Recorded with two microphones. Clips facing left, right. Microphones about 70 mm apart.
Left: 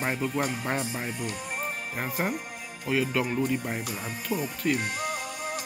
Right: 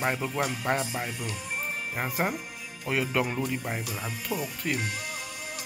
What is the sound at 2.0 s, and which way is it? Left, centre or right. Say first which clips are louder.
Speech: right 1 dB; centre.